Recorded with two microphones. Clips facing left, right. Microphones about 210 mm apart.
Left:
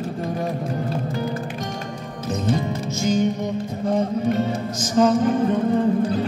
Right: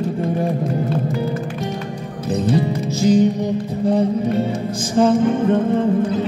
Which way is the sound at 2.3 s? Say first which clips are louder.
Right 5 dB; 30° right (ahead or behind).